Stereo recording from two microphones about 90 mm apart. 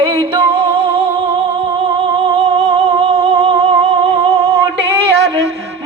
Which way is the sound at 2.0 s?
90° right.